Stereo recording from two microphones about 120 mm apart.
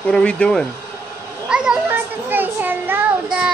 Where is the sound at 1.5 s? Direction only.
5° right (ahead or behind).